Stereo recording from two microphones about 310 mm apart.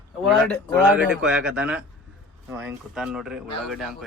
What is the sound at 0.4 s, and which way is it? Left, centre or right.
A man's voice, centre.